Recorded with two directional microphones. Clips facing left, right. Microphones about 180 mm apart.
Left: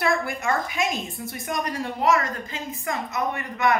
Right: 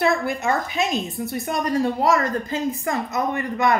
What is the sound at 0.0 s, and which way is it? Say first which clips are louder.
A woman's voice: right 3 dB; 25° right (ahead or behind).